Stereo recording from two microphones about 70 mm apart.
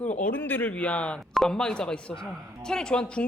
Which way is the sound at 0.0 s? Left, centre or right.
Left.